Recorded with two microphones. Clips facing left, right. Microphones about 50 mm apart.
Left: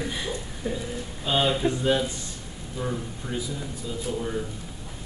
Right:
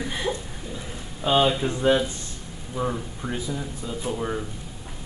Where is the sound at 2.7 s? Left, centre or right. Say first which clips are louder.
Right 3 dB; right.